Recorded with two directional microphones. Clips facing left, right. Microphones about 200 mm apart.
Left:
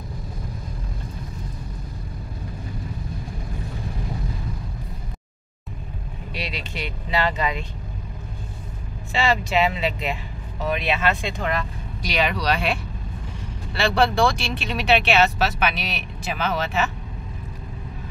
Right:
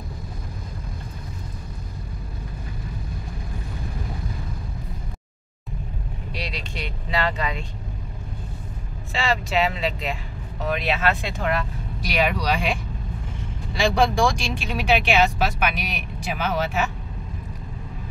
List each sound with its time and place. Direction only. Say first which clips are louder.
6.3 s speech: left 1 dB; 5° left (ahead or behind)
9.1 s speech: left 2 dB; centre (ahead or behind)
13.9 s speech: left 2 dB; 15° right (ahead or behind)